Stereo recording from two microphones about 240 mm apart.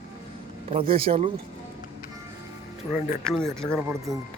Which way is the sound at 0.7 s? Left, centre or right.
Right.